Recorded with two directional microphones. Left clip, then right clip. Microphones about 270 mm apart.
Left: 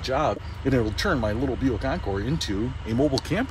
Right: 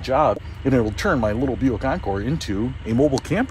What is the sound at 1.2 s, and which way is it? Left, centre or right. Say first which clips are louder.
Speech: right 5 dB; right.